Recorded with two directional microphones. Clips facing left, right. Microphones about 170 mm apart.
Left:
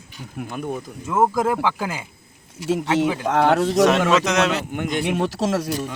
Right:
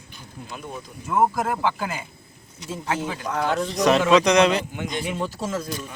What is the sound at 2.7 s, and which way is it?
A man's voice, 80° left.